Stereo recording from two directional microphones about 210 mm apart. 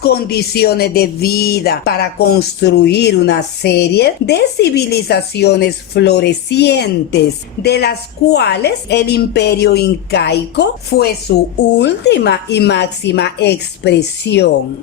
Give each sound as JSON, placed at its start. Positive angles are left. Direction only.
{"t": 0.0, "sound": "speech", "side_deg": 50}